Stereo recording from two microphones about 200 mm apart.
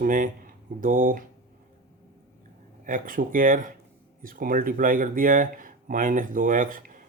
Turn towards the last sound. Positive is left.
turn(degrees=-40)  # may be behind; listen again after turning